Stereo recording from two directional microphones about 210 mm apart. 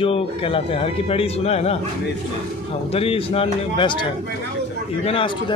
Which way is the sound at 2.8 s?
25° left (ahead or behind).